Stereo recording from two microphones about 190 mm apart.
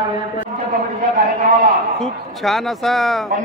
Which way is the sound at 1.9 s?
Centre (ahead or behind).